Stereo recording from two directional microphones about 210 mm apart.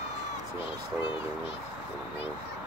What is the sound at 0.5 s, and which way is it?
Speech, 25° left (ahead or behind).